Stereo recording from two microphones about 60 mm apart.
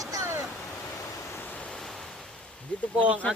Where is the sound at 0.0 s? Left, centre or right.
Right.